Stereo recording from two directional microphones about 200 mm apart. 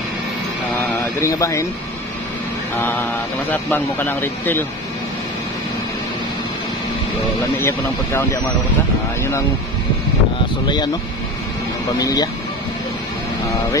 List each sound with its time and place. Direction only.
1.2 s speech: 15° left (ahead or behind)
2.8 s speech: 10° left (ahead or behind)
7.6 s speech: 10° left (ahead or behind)
12.0 s speech: 20° left (ahead or behind)